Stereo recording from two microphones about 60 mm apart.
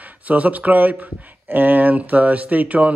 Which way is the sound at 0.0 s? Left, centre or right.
Right.